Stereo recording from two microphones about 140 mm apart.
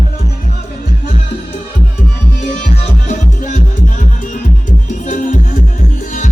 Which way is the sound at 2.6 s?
65° left (ahead or behind).